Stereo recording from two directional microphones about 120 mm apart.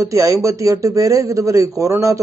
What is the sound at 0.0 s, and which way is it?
Speech, 25° right (ahead or behind).